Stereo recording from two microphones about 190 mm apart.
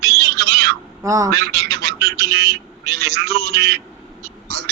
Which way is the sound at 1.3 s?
60° right (ahead or behind).